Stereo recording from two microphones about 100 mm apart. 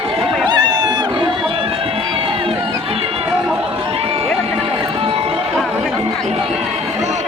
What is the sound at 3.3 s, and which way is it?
Chatter, 10° right (ahead or behind).